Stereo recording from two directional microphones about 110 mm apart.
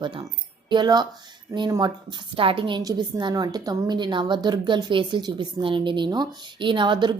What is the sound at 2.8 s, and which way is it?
A woman's voice, 35° right (ahead or behind).